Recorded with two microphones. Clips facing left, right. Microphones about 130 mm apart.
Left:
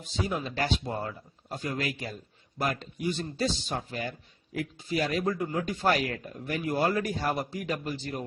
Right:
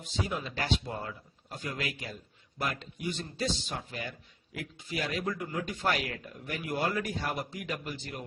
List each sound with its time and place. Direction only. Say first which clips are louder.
0.0 s speech: left 3 dB; 40° left (ahead or behind)